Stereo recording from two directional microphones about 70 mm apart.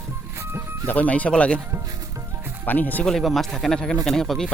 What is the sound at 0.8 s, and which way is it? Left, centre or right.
Speech, left.